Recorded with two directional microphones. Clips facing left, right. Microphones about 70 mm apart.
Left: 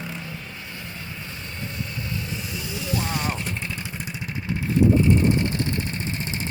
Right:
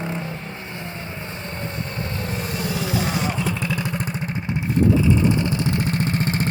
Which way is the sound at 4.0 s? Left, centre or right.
Right.